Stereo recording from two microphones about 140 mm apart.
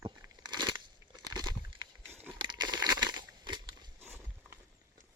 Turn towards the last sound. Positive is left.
turn(degrees=-15)  # may be behind; listen again after turning